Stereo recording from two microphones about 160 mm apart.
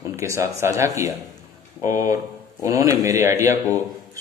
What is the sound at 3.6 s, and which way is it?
Speech, 15° left (ahead or behind).